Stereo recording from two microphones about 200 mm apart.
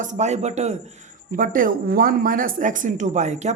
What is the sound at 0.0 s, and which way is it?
Speech, 35° right (ahead or behind).